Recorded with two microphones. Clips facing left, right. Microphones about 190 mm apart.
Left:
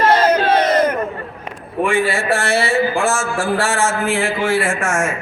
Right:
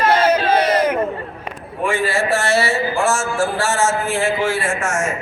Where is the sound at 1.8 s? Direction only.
55° left (ahead or behind).